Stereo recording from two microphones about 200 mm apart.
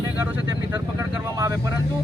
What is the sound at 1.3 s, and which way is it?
Speech, 15° right (ahead or behind).